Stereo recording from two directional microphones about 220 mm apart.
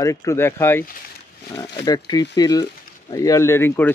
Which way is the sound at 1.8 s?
20° left (ahead or behind).